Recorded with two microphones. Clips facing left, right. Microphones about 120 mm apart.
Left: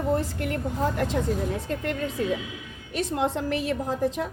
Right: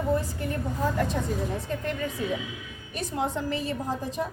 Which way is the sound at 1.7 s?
90° left.